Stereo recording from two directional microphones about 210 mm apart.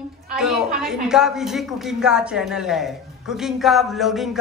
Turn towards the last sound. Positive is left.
turn(degrees=0)  # may be behind; listen again after turning